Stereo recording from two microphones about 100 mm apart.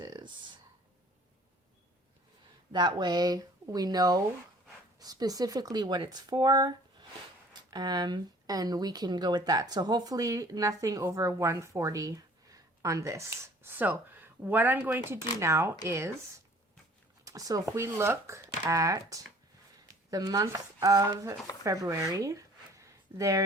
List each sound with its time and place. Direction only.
0.0 s a sound: 50° right (ahead or behind)
2.7 s speech: 45° right (ahead or behind)
7.7 s speech: 45° right (ahead or behind); by 16.1 s 25° right (ahead or behind)
17.2 s speech: 35° right (ahead or behind)